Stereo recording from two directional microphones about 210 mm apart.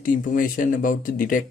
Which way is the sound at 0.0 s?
40° left (ahead or behind).